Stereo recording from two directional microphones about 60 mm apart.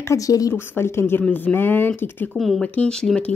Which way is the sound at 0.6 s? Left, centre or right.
Left.